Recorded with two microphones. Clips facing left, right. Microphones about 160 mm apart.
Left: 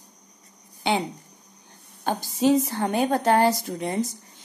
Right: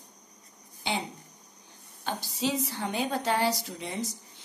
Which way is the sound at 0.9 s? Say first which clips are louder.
Left 8 dB; 60° left (ahead or behind).